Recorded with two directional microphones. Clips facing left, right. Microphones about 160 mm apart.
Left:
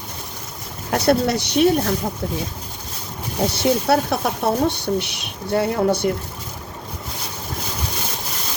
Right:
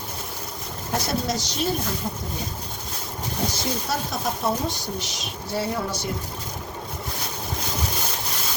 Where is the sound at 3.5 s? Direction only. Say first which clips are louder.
Left 10 dB; 65° left (ahead or behind).